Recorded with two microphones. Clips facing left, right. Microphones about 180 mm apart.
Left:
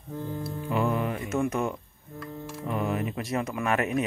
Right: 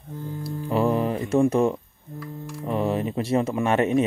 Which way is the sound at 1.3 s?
30° right (ahead or behind).